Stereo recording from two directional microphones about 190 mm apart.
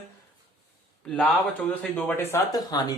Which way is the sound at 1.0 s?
5° left (ahead or behind).